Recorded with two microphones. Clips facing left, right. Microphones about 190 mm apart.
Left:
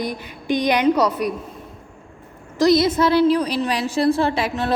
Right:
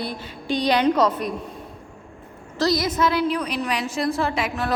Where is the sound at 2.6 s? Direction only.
25° left (ahead or behind).